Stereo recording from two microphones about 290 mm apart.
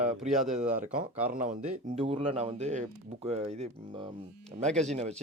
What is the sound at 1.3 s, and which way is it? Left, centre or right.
Speech, right.